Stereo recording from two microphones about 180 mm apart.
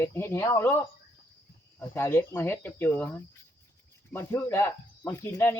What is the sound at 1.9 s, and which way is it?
Speech, 15° left (ahead or behind).